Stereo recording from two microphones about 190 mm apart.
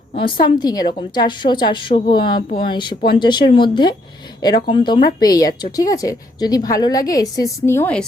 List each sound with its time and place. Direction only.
0.4 s speech: 20° left (ahead or behind)